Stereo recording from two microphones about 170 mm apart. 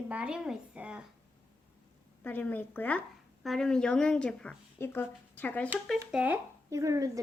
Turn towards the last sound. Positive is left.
turn(degrees=-20)  # may be behind; listen again after turning